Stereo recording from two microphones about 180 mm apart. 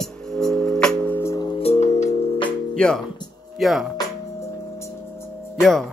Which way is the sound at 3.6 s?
Centre (ahead or behind).